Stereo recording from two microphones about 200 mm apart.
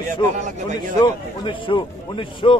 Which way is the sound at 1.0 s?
25° left (ahead or behind).